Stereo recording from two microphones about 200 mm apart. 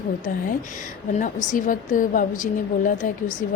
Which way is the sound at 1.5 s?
40° left (ahead or behind).